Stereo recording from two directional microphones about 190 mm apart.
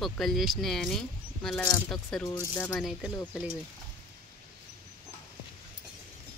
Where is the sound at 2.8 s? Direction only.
5° right (ahead or behind).